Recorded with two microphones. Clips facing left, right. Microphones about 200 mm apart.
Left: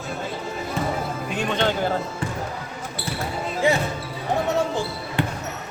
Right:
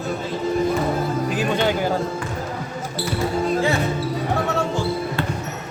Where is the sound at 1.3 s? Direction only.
5° right (ahead or behind).